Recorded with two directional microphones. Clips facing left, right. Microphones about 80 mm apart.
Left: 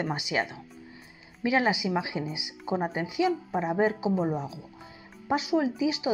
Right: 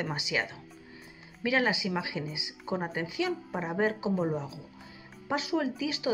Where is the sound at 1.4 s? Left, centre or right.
Left.